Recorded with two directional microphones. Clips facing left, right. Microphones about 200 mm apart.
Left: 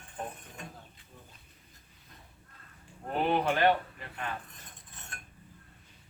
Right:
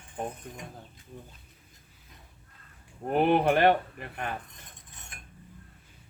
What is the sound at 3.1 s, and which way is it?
Speech, 60° right (ahead or behind).